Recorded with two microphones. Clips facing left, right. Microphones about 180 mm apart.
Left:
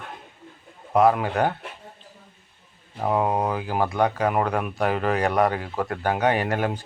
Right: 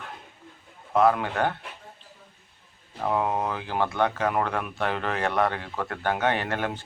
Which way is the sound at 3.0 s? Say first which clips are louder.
Left 3 dB; 15° left (ahead or behind).